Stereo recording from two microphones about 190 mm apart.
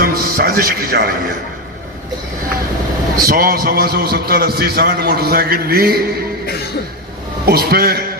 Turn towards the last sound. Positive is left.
turn(degrees=-55)  # may be behind; listen again after turning